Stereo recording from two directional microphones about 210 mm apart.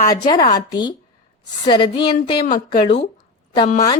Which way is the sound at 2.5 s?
35° left (ahead or behind).